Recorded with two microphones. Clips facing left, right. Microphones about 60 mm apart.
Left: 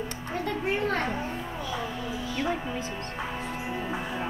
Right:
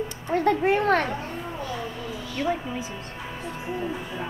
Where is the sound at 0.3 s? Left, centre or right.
Right.